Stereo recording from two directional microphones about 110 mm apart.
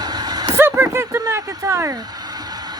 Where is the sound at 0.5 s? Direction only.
25° right (ahead or behind).